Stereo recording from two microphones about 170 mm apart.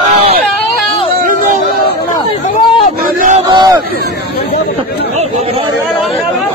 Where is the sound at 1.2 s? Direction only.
50° right (ahead or behind).